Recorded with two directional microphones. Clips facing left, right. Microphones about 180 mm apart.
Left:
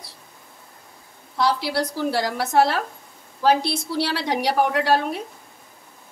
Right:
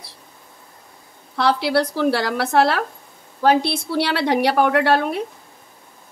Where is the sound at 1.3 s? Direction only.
65° right (ahead or behind).